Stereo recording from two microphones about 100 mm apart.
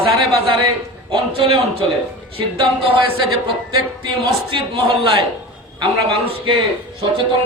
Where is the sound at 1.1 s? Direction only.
60° right (ahead or behind).